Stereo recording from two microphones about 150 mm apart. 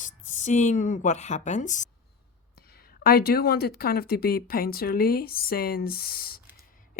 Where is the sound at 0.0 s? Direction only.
55° left (ahead or behind).